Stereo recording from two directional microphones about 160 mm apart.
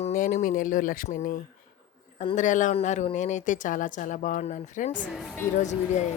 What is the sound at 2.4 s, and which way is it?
A man's voice, 50° left (ahead or behind).